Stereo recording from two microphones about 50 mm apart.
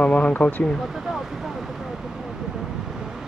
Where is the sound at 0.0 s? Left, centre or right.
Left.